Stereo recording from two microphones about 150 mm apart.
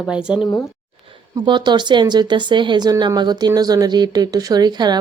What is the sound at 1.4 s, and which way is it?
Speech, 30° right (ahead or behind).